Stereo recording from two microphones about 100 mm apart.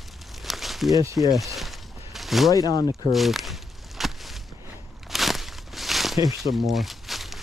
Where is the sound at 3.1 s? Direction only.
Centre (ahead or behind).